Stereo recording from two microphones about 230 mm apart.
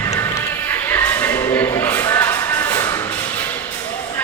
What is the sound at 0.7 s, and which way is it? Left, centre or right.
Music, centre.